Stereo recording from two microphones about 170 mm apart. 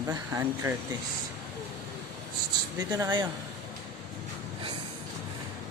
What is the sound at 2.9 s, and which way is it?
Speech, 25° right (ahead or behind).